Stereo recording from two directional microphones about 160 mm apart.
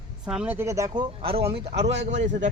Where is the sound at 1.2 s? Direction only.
35° right (ahead or behind).